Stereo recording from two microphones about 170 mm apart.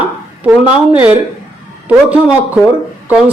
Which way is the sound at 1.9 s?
10° right (ahead or behind).